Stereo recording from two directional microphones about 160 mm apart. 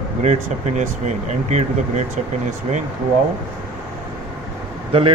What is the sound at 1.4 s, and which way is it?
Speech, 45° right (ahead or behind).